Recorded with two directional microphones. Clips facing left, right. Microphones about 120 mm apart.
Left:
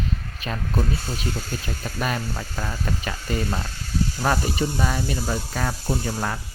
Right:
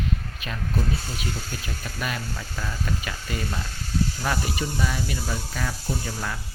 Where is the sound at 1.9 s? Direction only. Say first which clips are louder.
Left 5 dB; 40° left (ahead or behind).